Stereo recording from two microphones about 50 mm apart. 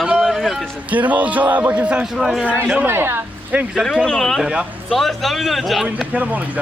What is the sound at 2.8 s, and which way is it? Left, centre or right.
Music, right.